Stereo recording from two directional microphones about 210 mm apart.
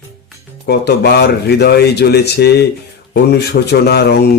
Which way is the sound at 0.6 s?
50° left (ahead or behind).